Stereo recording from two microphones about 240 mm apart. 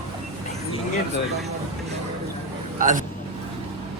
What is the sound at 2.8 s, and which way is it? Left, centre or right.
Speech, right.